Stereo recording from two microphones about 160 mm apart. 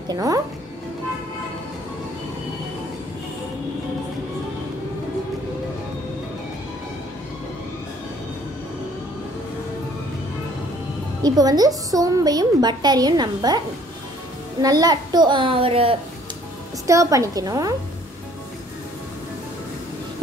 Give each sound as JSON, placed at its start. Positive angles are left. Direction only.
{"t": 0.1, "sound": "a woman's voice", "side_deg": -20}
{"t": 11.2, "sound": "a woman's voice", "side_deg": -25}
{"t": 14.6, "sound": "a child's voice", "side_deg": -25}
{"t": 16.8, "sound": "a woman's voice", "side_deg": -20}